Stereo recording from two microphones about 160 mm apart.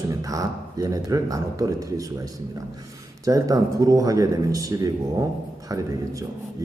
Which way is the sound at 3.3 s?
20° right (ahead or behind).